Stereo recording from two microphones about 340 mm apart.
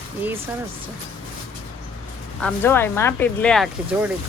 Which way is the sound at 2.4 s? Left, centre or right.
Centre.